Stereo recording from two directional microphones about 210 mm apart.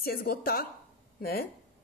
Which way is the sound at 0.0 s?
45° left (ahead or behind).